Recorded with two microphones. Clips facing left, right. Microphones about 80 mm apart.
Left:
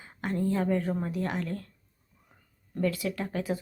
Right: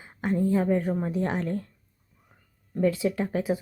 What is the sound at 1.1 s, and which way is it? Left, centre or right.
Speech, right.